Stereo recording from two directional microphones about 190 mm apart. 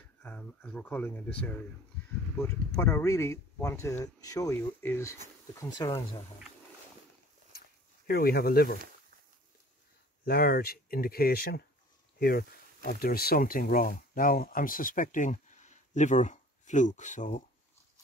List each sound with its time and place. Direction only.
0.2 s speech: 10° left (ahead or behind)
8.1 s speech: 55° left (ahead or behind)
10.2 s speech: 55° left (ahead or behind)